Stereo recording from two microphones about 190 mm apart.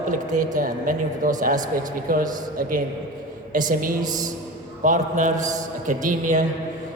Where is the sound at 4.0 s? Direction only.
20° right (ahead or behind).